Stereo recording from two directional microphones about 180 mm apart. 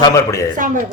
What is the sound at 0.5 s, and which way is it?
Speech, 45° right (ahead or behind).